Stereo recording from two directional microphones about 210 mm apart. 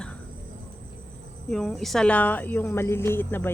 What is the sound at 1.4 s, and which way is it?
A woman's voice, 5° left (ahead or behind).